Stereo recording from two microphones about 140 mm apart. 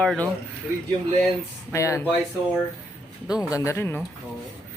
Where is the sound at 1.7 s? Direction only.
20° left (ahead or behind).